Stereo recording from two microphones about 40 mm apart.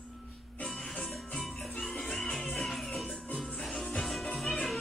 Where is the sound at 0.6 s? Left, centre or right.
Left.